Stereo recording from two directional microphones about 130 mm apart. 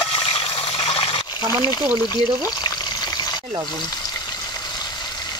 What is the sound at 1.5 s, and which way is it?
Speech, 30° left (ahead or behind).